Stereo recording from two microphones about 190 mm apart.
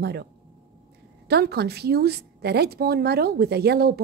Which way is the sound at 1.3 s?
60° right (ahead or behind).